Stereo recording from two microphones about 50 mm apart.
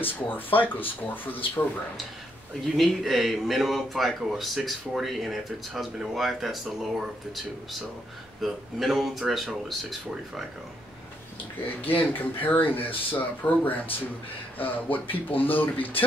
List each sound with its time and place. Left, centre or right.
0.0 s speech: left
2.6 s speech: centre
11.9 s speech: left